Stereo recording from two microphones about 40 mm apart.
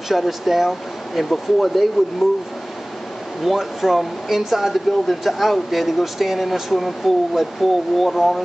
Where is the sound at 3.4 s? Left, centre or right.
Centre.